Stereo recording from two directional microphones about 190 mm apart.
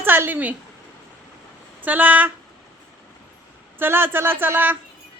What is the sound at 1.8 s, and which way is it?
Speech, 10° right (ahead or behind).